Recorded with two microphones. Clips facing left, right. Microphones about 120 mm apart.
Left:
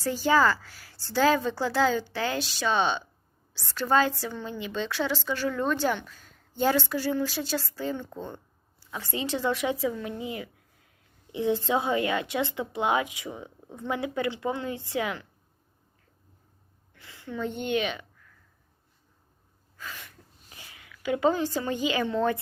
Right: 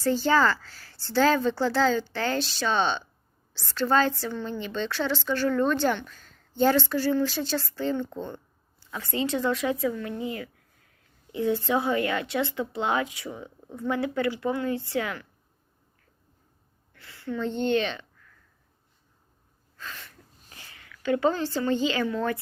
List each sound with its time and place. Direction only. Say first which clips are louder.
0.0 s a woman's voice: right 1 dB; 10° left (ahead or behind)
16.9 s a woman's voice: right 4 dB; 15° left (ahead or behind)
19.7 s a sound: even; 10° left (ahead or behind)